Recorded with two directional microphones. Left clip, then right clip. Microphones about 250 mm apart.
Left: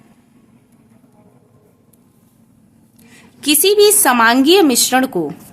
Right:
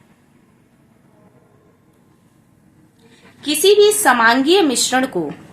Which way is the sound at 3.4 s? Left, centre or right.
Left.